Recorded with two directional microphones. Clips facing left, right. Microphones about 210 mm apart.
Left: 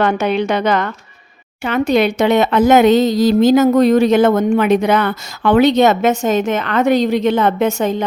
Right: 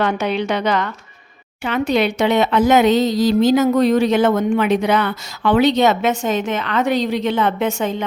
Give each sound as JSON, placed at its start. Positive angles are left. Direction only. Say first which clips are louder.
{"t": 0.0, "sound": "a woman's voice", "louder": "left 4 dB", "side_deg": 50}